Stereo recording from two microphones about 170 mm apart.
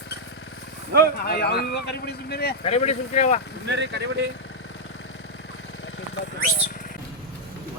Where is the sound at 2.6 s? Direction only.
40° left (ahead or behind).